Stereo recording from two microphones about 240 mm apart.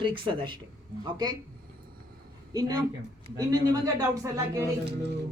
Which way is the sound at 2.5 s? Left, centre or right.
Centre.